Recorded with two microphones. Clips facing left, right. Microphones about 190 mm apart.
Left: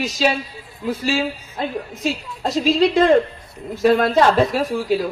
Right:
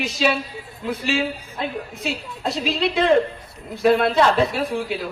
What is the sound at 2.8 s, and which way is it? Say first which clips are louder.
A woman's voice: left 3 dB; 45° left (ahead or behind).